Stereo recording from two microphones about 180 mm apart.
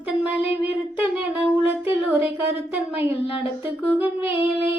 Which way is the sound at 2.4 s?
10° right (ahead or behind).